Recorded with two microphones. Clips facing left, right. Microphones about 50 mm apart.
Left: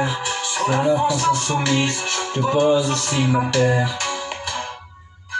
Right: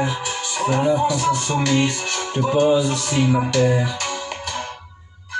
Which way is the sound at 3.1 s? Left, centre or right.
Centre.